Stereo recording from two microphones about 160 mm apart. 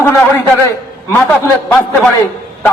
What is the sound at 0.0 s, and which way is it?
A man's voice, 15° left (ahead or behind).